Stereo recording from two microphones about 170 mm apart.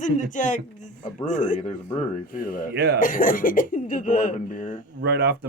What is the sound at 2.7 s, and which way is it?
Speech, 70° right (ahead or behind).